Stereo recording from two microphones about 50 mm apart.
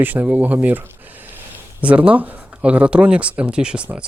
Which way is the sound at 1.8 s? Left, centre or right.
Right.